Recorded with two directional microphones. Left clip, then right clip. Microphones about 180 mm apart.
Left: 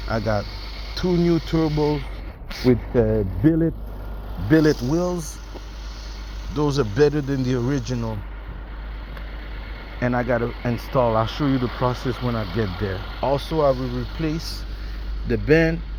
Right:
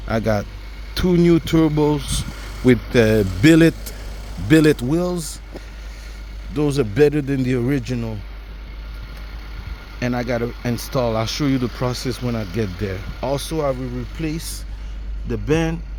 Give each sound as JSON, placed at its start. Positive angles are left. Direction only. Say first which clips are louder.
{"t": 0.1, "sound": "speech", "louder": "right 3 dB", "side_deg": -45}
{"t": 2.6, "sound": "speech", "louder": "right 4 dB", "side_deg": -65}
{"t": 4.5, "sound": "speech", "louder": "right 3 dB", "side_deg": -35}
{"t": 6.5, "sound": "speech", "louder": "right 2 dB", "side_deg": -35}
{"t": 10.0, "sound": "speech", "louder": "left 1 dB", "side_deg": -25}
{"t": 11.8, "sound": "speech", "louder": "left 1 dB", "side_deg": -30}
{"t": 14.2, "sound": "a man's voice", "louder": "right 1 dB", "side_deg": -15}